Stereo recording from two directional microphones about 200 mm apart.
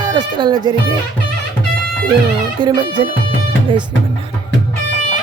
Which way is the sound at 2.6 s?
25° right (ahead or behind).